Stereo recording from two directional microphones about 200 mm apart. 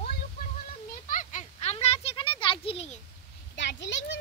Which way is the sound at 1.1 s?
40° left (ahead or behind).